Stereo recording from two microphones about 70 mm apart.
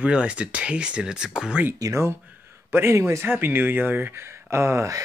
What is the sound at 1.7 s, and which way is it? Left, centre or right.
Speech, right.